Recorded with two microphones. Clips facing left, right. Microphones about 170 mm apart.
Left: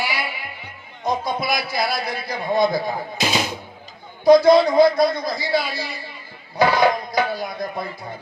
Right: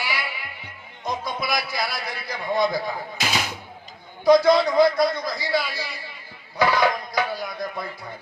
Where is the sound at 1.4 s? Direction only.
30° left (ahead or behind).